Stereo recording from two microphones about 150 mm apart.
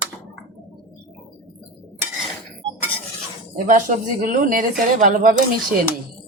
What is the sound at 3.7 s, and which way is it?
Speech, 60° right (ahead or behind).